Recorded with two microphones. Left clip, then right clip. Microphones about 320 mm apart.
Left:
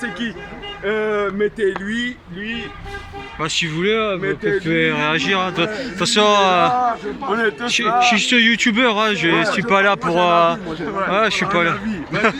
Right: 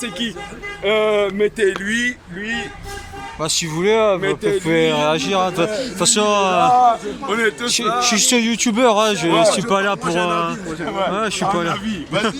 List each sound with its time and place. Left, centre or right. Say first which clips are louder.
0.9 s speech: right 3 dB; right
3.4 s speech: right 1 dB; centre
7.7 s speech: left 3 dB; centre